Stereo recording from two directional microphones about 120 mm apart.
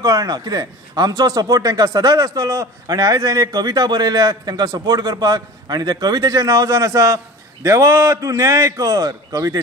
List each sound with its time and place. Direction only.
0.0 s a man's voice: 30° right (ahead or behind)